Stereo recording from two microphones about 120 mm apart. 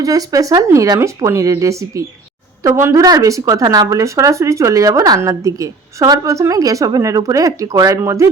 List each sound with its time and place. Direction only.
0.0 s speech: 30° right (ahead or behind)